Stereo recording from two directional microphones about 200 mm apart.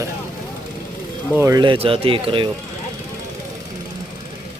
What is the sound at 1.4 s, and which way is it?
Speech, 15° right (ahead or behind).